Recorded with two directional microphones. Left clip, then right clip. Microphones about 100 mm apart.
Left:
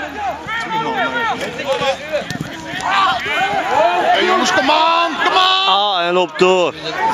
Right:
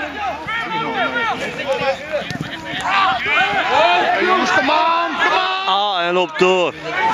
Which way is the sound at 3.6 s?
35° right (ahead or behind).